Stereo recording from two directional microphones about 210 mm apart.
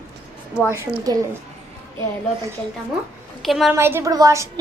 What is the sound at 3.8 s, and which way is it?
Speech, 10° right (ahead or behind).